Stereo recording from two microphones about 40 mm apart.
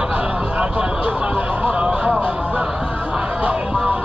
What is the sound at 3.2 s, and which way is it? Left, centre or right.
Music, right.